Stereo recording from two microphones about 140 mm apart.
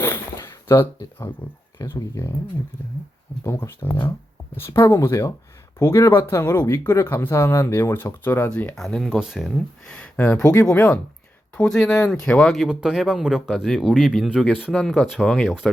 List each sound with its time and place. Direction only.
0.0 s a sound: 20° left (ahead or behind)
1.8 s speech: 20° left (ahead or behind)
3.4 s speech: 15° left (ahead or behind); by 15.7 s centre (ahead or behind)